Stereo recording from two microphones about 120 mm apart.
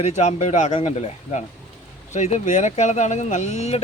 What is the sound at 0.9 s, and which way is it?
Speech, 70° left (ahead or behind).